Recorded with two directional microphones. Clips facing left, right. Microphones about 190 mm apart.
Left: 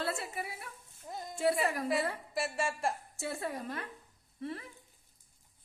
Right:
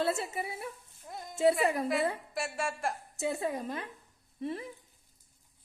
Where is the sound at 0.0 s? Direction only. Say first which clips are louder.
Right 5 dB; 25° right (ahead or behind).